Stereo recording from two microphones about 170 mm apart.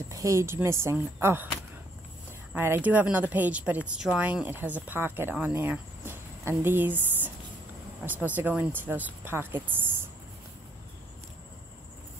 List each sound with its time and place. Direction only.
0.1 s speech: 20° right (ahead or behind)
2.5 s speech: 10° right (ahead or behind)